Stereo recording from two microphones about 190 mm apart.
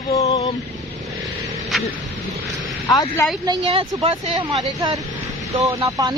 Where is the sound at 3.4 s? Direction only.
30° right (ahead or behind).